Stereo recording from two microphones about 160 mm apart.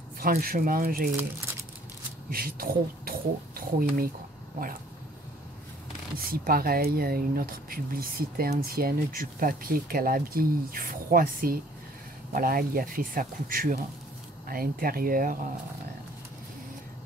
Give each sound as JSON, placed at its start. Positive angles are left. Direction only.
{"t": 0.2, "sound": "speech", "side_deg": -65}
{"t": 2.3, "sound": "speech", "side_deg": -65}
{"t": 6.1, "sound": "speech", "side_deg": -70}